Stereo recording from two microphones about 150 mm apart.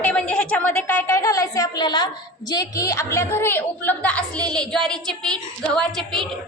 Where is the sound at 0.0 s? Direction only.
10° left (ahead or behind).